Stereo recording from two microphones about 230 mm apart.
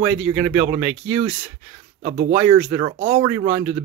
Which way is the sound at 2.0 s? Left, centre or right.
Right.